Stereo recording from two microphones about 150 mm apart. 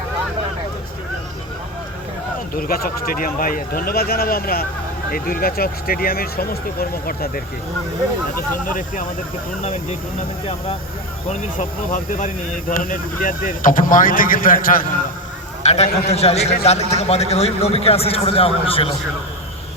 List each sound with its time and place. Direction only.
2.6 s speech: 75° left (ahead or behind)
8.4 s speech: 65° left (ahead or behind)
11.9 s speech: 60° left (ahead or behind)
15.6 s a man's voice: 45° left (ahead or behind)